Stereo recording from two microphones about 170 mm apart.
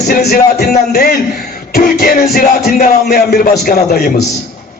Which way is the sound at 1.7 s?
60° left (ahead or behind).